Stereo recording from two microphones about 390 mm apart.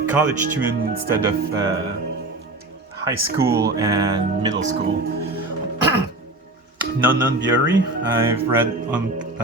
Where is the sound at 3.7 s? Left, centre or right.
Centre.